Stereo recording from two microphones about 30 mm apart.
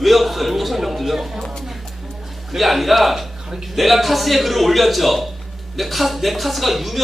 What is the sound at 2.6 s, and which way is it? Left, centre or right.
Speech, centre.